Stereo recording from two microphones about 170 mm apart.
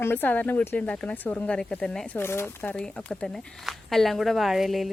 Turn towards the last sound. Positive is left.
turn(degrees=0)  # may be behind; listen again after turning